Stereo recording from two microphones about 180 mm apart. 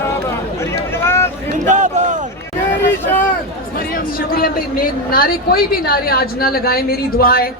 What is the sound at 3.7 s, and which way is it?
Speech, 55° left (ahead or behind).